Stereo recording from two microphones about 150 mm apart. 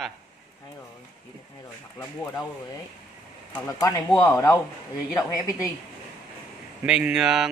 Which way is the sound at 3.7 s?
20° left (ahead or behind).